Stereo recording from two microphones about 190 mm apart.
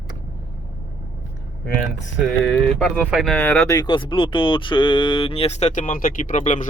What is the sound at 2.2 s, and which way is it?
Speech, centre (ahead or behind).